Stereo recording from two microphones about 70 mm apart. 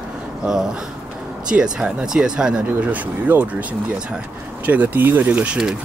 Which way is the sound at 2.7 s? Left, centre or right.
Right.